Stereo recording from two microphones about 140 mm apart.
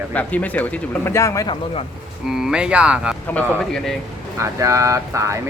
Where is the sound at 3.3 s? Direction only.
5° left (ahead or behind).